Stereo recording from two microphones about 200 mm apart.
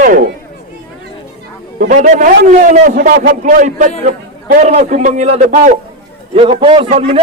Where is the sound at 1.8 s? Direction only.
40° right (ahead or behind).